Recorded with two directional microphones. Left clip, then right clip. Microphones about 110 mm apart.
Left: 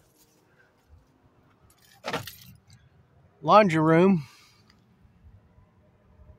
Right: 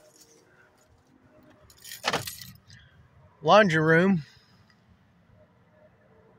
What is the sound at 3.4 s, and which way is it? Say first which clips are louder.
Speech: even; 20° left (ahead or behind).